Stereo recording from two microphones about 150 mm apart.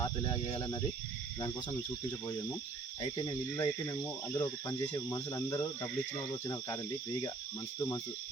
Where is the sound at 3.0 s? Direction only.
30° left (ahead or behind).